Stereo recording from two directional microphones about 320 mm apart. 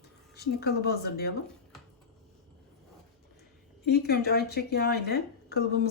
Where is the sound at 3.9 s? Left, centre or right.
Left.